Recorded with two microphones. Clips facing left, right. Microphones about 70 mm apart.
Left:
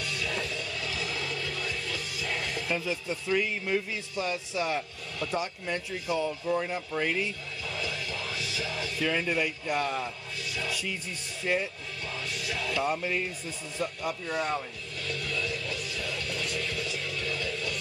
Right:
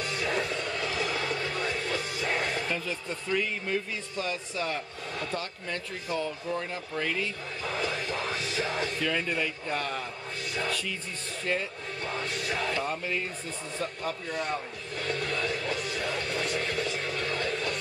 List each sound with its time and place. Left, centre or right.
0.0 s music: right
2.7 s a man's voice: centre
7.6 s music: right
9.0 s a man's voice: centre
10.4 s music: right
10.7 s a man's voice: centre
12.0 s music: right
12.8 s a man's voice: centre
15.0 s music: right